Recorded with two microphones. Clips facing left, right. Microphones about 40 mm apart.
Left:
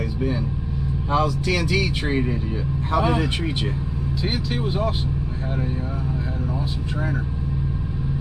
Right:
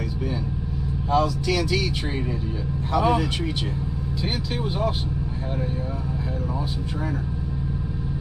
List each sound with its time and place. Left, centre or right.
1.1 s speech: centre